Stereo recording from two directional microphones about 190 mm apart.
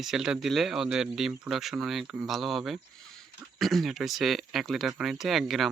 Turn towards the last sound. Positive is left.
turn(degrees=0)  # may be behind; listen again after turning